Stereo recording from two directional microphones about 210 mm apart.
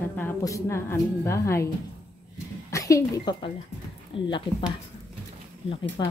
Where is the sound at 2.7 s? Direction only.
15° left (ahead or behind).